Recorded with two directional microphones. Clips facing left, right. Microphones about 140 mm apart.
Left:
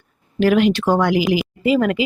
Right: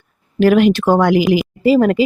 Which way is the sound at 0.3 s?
45° right (ahead or behind).